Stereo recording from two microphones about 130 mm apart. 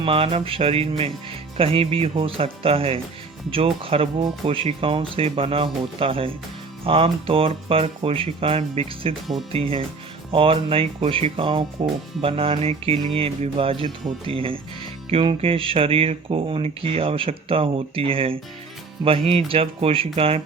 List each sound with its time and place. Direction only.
0.0 s speech: 45° right (ahead or behind)